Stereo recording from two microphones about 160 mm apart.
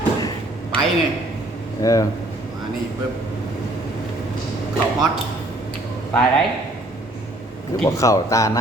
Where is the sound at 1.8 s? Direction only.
20° left (ahead or behind).